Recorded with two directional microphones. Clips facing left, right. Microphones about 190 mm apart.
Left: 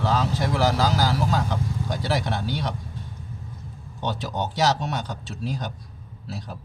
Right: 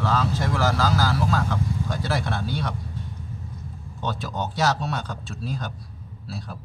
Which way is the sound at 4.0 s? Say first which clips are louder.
Left 1 dB; 20° left (ahead or behind).